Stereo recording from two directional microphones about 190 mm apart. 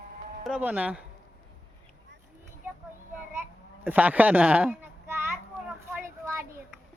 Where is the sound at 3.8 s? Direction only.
10° right (ahead or behind).